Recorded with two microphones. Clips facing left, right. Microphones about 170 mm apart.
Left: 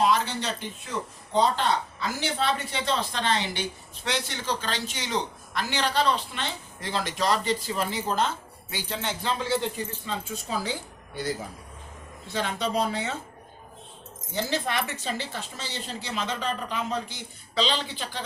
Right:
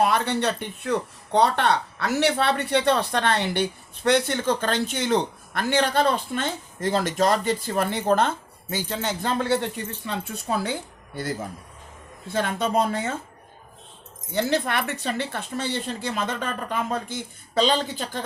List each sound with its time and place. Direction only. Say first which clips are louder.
0.0 s speech: right 3 dB; 60° right (ahead or behind)
8.7 s a woman's voice: right 4 dB; 45° right (ahead or behind)
14.4 s a woman's voice: right 3 dB; 60° right (ahead or behind)